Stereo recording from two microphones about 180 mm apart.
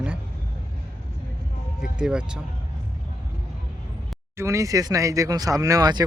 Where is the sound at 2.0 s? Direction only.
5° right (ahead or behind).